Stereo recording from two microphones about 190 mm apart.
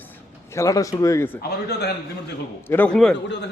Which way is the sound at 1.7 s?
60° left (ahead or behind).